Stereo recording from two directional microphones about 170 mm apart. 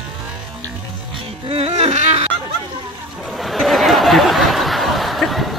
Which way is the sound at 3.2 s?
Centre (ahead or behind).